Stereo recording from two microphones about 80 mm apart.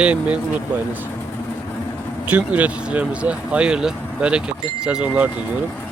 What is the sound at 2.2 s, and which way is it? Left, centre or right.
Speech, centre.